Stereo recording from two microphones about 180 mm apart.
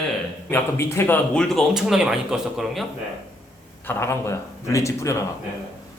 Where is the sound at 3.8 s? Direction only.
15° left (ahead or behind).